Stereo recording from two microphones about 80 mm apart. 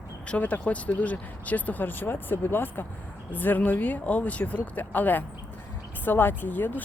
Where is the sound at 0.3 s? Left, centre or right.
Centre.